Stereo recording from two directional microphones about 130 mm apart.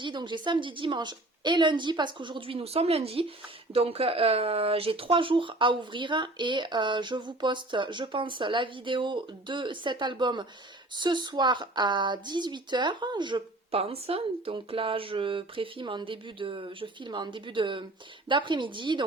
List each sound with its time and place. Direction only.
0.0 s a woman's voice: 35° right (ahead or behind)